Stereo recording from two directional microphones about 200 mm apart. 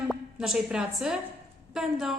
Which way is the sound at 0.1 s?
5° right (ahead or behind).